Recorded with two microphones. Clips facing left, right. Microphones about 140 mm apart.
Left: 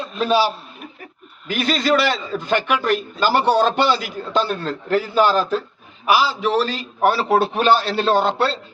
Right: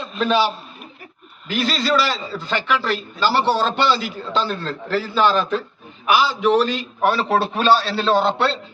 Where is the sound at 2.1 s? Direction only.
20° left (ahead or behind).